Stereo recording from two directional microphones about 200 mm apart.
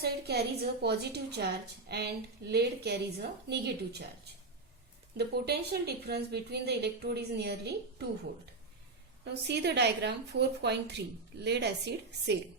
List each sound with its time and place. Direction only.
0.0 s a woman's voice: 55° right (ahead or behind)
5.1 s speech: 55° right (ahead or behind)
9.3 s speech: 60° right (ahead or behind)